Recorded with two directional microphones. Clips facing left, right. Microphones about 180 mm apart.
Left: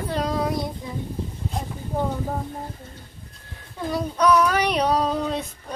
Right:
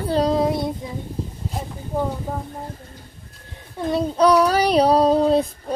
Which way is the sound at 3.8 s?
25° right (ahead or behind).